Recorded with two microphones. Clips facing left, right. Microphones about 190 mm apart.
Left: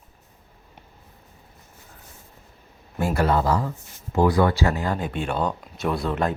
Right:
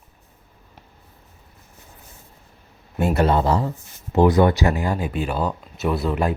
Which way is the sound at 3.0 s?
25° right (ahead or behind).